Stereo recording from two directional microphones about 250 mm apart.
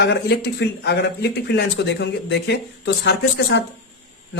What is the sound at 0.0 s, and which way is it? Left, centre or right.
Speech, left.